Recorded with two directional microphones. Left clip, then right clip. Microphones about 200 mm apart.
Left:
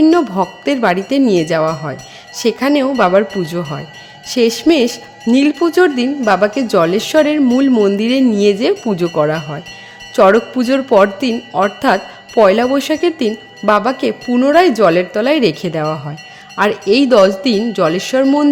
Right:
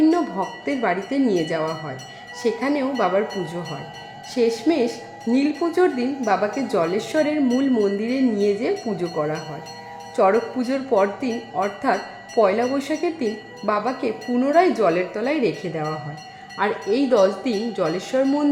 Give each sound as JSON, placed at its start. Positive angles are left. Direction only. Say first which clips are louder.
{"t": 0.0, "sound": "speech", "louder": "left 8 dB", "side_deg": 45}